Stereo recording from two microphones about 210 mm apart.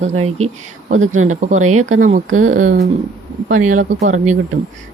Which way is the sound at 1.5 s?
90° right.